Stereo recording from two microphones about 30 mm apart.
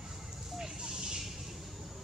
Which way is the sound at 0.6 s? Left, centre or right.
Centre.